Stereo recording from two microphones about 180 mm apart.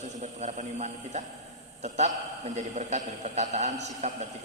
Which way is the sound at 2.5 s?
40° right (ahead or behind).